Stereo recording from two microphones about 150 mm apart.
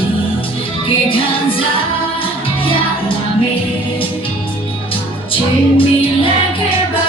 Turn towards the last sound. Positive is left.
turn(degrees=35)  # may be behind; listen again after turning